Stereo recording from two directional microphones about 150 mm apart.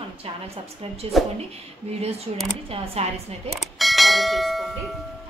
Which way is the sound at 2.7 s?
40° right (ahead or behind).